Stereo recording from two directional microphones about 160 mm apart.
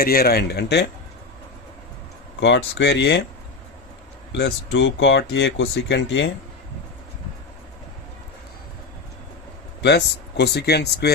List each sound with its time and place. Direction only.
0.0 s speech: 70° left (ahead or behind); by 0.9 s 90° left
2.4 s speech: 90° left
4.4 s speech: 90° left
9.8 s speech: 90° left